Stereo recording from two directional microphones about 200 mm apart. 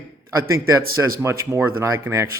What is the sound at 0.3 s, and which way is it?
Speech, 15° right (ahead or behind).